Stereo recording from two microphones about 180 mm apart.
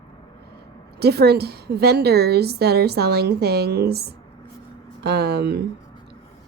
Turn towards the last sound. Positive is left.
turn(degrees=-65)  # may be behind; listen again after turning